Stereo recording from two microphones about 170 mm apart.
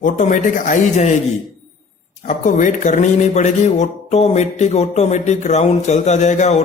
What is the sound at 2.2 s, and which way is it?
Speech, 50° left (ahead or behind).